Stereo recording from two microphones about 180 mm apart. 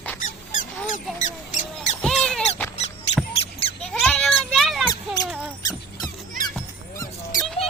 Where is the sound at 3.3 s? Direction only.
30° left (ahead or behind).